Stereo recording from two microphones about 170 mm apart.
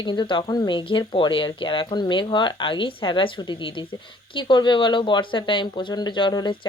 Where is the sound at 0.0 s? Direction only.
25° left (ahead or behind).